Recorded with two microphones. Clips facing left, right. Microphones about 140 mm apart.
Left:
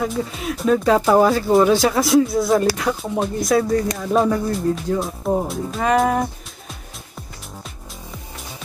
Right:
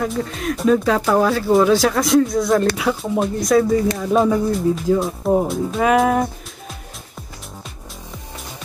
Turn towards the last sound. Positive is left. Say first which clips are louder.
# right 2 dB
turn(degrees=0)  # may be behind; listen again after turning